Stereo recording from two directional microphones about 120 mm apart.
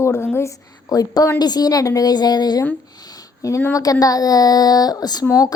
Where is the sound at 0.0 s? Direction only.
20° left (ahead or behind).